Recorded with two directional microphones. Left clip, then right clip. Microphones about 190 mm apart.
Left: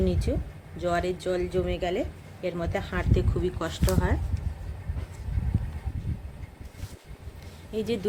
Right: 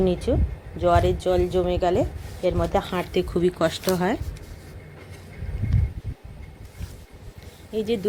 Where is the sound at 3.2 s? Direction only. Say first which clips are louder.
Right 11 dB; 35° right (ahead or behind).